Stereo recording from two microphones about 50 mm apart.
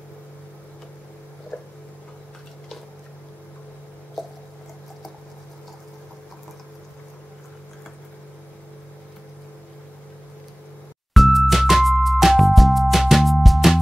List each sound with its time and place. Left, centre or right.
1.5 s a sound: left
4.2 s squish: centre
11.1 s music: centre